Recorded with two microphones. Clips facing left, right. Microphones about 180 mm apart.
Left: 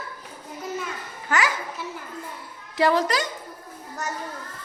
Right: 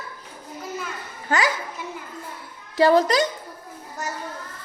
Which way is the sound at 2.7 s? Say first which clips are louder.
Right 4 dB; 35° right (ahead or behind).